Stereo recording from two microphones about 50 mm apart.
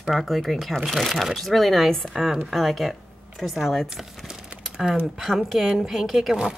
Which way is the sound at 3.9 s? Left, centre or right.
Centre.